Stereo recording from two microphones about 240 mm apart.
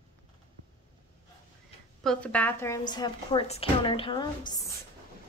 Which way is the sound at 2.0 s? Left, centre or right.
Centre.